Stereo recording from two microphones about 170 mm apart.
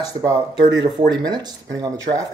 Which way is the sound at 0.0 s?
20° right (ahead or behind).